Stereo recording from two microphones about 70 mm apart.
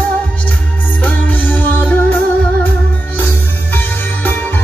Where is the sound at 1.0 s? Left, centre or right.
Left.